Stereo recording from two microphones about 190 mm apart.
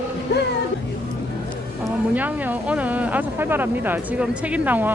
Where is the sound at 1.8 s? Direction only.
10° right (ahead or behind).